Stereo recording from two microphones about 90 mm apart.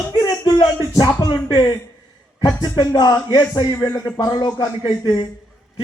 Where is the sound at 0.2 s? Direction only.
45° left (ahead or behind).